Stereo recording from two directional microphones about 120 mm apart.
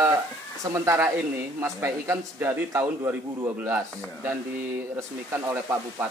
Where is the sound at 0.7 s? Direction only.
25° right (ahead or behind).